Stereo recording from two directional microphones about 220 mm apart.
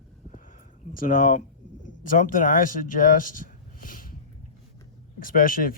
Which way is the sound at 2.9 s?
40° left (ahead or behind).